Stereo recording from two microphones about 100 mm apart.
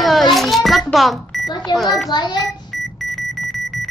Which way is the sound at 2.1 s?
45° left (ahead or behind).